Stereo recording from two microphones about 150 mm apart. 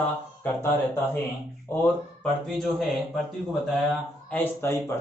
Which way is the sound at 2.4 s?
Centre (ahead or behind).